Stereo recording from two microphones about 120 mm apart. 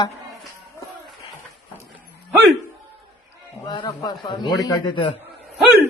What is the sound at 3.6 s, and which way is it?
A man's voice, 40° left (ahead or behind).